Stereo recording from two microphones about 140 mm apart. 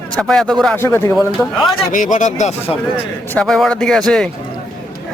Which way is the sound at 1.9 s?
70° left (ahead or behind).